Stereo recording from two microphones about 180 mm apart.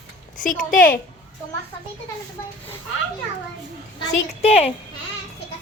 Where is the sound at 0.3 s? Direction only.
50° left (ahead or behind).